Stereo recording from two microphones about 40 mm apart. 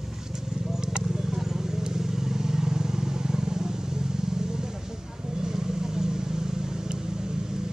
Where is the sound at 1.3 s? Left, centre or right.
Centre.